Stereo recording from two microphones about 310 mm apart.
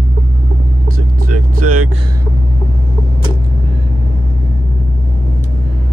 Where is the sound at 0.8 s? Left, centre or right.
Right.